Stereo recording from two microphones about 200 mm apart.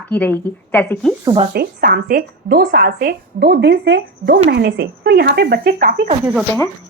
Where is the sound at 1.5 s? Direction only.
50° right (ahead or behind).